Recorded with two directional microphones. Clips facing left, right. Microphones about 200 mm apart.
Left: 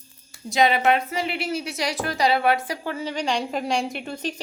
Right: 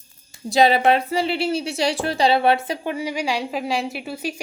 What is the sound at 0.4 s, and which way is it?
A woman's voice, 35° right (ahead or behind).